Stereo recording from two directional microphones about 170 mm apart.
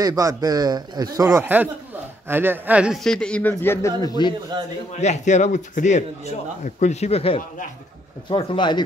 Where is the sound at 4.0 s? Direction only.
25° left (ahead or behind).